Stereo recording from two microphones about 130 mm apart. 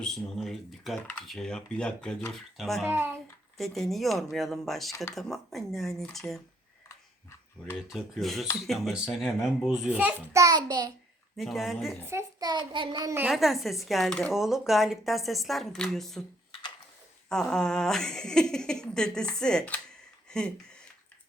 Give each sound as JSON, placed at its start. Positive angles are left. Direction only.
{"t": 0.0, "sound": "speech", "side_deg": 0}
{"t": 2.8, "sound": "a child's voice", "side_deg": -15}
{"t": 3.6, "sound": "speech", "side_deg": 0}
{"t": 6.8, "sound": "a sound", "side_deg": 20}
{"t": 7.8, "sound": "speech", "side_deg": -5}
{"t": 10.3, "sound": "child singing", "side_deg": -30}
{"t": 11.3, "sound": "speech", "side_deg": 0}
{"t": 12.0, "sound": "a child's voice", "side_deg": -20}
{"t": 12.5, "sound": "child singing", "side_deg": -35}
{"t": 13.3, "sound": "speech", "side_deg": 0}
{"t": 17.2, "sound": "speech", "side_deg": 5}